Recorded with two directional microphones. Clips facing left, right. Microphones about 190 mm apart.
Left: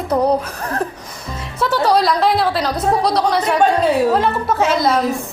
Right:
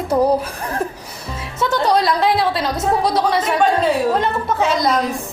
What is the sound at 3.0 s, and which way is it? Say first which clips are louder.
A woman's voice: left 1 dB; centre (ahead or behind).